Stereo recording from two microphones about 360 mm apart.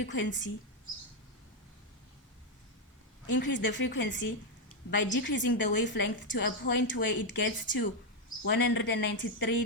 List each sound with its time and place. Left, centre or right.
0.0 s speech: left
3.3 s a woman's voice: left